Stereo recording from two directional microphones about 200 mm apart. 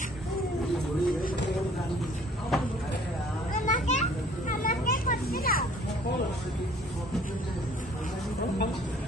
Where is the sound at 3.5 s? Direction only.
35° left (ahead or behind).